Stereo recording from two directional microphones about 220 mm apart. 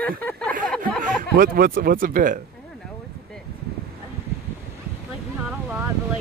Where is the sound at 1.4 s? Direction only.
40° right (ahead or behind).